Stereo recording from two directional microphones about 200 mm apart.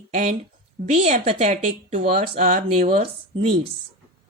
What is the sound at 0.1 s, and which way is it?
A woman's voice, 35° right (ahead or behind).